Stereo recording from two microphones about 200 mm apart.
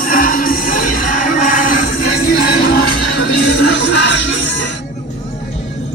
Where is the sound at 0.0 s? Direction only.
45° left (ahead or behind).